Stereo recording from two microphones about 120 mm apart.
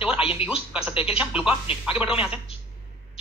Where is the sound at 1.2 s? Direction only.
10° right (ahead or behind).